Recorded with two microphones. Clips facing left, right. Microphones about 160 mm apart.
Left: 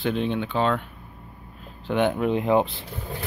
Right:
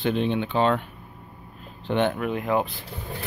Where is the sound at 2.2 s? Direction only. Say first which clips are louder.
Left 4 dB; 25° left (ahead or behind).